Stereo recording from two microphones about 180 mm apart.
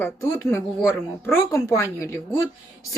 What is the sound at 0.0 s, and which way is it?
A woman's voice, 15° left (ahead or behind).